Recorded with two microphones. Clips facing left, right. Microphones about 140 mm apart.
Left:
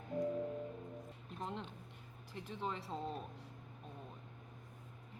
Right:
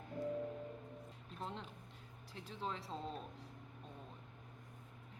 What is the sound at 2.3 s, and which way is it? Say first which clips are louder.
Speech: left 2 dB; centre (ahead or behind).